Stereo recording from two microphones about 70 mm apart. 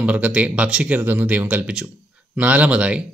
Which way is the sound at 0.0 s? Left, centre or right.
Centre.